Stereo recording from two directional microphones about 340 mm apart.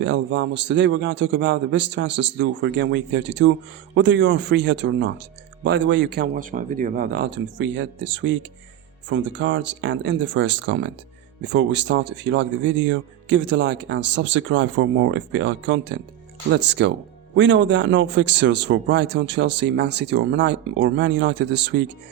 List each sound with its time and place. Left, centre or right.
0.0 s speech: right